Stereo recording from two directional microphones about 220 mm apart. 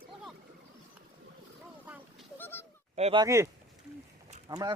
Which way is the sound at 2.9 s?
25° right (ahead or behind).